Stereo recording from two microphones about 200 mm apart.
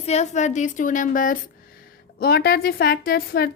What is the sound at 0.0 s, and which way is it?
A woman's voice, 35° left (ahead or behind).